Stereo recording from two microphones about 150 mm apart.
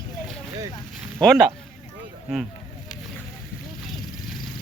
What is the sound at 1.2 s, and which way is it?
Speech, centre (ahead or behind).